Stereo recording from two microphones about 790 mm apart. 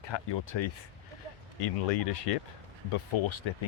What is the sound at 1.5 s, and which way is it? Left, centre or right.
Speech, left.